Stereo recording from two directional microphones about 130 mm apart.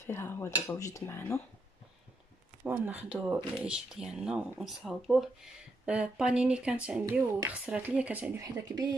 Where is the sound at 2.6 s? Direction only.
15° right (ahead or behind).